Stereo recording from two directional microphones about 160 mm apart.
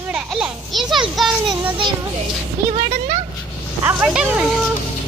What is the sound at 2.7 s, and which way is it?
Speech, 45° right (ahead or behind).